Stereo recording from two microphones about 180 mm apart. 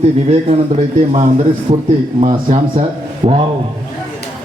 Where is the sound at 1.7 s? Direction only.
40° right (ahead or behind).